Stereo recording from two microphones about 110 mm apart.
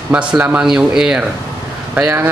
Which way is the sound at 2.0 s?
25° right (ahead or behind).